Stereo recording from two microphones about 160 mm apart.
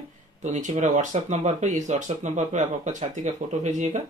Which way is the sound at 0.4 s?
50° right (ahead or behind).